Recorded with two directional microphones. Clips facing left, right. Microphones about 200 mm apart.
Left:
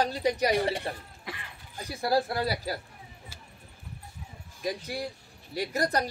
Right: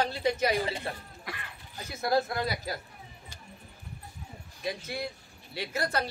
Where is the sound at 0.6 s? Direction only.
70° left (ahead or behind).